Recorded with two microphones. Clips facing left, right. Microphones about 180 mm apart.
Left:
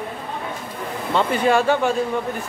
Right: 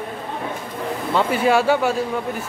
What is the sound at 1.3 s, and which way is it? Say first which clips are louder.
Speech: right 1 dB; 5° right (ahead or behind).